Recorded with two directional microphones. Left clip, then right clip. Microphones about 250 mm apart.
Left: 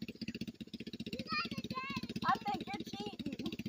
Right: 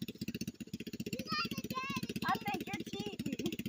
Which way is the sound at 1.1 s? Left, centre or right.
Right.